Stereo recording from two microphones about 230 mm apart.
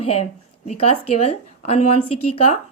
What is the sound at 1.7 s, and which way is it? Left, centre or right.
Speech, left.